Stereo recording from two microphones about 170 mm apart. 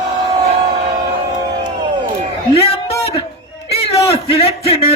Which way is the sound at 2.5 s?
35° left (ahead or behind).